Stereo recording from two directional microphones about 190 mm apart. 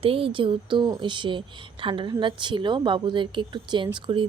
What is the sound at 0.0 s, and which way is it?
Speech, 30° right (ahead or behind).